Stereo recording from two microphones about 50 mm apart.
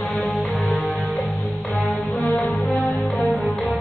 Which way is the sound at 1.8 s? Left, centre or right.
Left.